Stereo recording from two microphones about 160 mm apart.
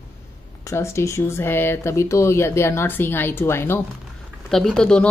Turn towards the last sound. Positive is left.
turn(degrees=5)  # may be behind; listen again after turning